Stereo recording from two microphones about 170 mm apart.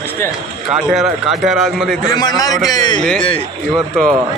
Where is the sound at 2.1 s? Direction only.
25° left (ahead or behind).